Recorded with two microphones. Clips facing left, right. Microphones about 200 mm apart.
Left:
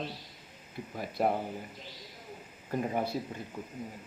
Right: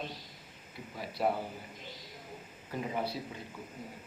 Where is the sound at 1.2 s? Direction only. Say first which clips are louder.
Left 2 dB; 45° left (ahead or behind).